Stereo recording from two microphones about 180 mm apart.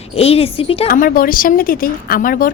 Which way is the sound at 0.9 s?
55° left (ahead or behind).